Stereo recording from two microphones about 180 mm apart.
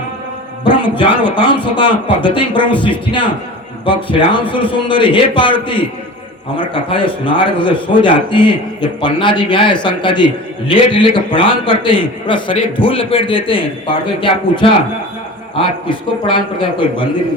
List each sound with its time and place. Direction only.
0.8 s a man's voice: 25° left (ahead or behind)